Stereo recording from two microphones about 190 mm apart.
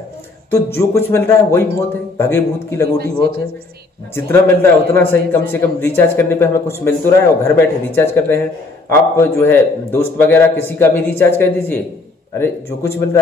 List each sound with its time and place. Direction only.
0.7 s a man's voice: 15° left (ahead or behind)
2.8 s a man's voice: 55° right (ahead or behind)
4.1 s a man's voice: 10° left (ahead or behind)